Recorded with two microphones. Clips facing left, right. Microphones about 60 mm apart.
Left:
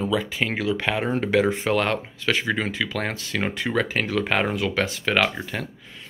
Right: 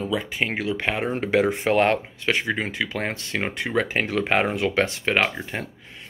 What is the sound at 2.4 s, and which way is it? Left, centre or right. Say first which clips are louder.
Speech: left 1 dB; right.